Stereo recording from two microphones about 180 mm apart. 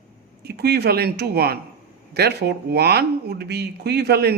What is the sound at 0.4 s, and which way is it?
Speech, 60° right (ahead or behind).